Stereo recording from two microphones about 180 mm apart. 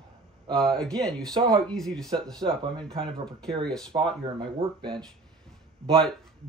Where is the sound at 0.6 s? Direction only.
5° left (ahead or behind).